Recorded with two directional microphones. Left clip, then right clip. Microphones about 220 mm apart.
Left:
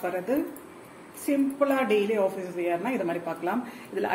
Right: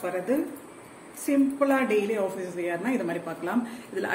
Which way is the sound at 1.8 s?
40° right (ahead or behind).